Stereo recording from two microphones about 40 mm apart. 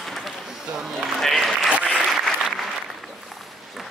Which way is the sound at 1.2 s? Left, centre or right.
Centre.